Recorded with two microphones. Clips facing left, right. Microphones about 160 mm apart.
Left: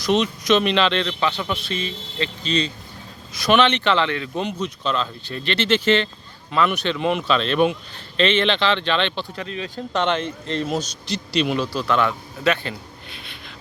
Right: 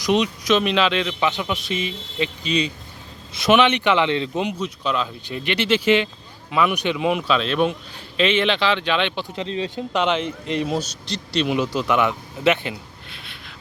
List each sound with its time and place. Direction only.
0.0 s a man's voice: 10° right (ahead or behind)
9.7 s a man's voice: 10° right (ahead or behind)
11.1 s speech: centre (ahead or behind)
11.5 s speech: 20° right (ahead or behind)
13.1 s a sound: centre (ahead or behind)